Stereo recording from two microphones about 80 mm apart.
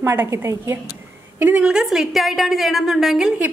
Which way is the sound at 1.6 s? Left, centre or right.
Centre.